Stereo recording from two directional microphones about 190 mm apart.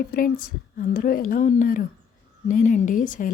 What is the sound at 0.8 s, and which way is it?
A woman's voice, 50° left (ahead or behind).